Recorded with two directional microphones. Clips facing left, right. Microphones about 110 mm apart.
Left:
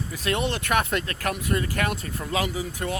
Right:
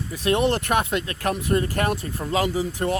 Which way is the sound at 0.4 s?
45° right (ahead or behind).